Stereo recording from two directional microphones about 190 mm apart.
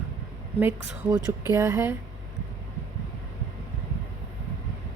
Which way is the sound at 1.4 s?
15° right (ahead or behind).